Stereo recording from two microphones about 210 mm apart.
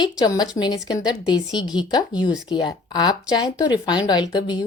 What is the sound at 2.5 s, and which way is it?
A woman's voice, 20° left (ahead or behind).